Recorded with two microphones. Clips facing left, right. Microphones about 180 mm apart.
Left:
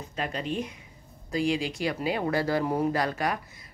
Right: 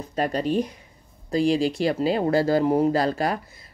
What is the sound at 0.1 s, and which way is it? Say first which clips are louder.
Speech: right 8 dB; 40° right (ahead or behind).